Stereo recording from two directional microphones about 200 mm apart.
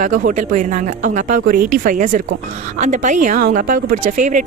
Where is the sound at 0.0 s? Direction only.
40° right (ahead or behind).